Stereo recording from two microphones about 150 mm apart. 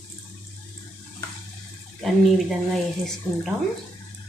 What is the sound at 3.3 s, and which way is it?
Speech, 15° left (ahead or behind).